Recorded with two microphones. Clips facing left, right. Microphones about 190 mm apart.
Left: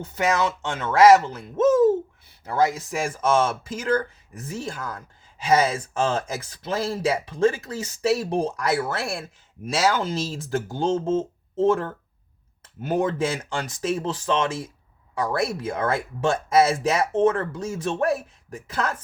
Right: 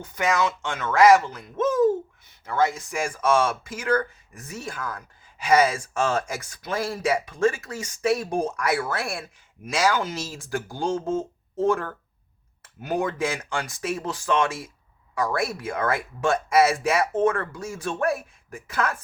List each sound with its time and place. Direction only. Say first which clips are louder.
0.0 s speech: left 1 dB; 30° left (ahead or behind)
2.4 s speech: left 1 dB; 35° left (ahead or behind)
3.1 s speech: even; 25° left (ahead or behind)